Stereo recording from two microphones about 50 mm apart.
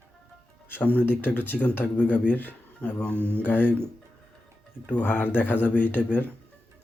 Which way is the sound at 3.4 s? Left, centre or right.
Left.